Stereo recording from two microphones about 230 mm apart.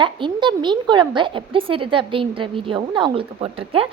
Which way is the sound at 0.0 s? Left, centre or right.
Right.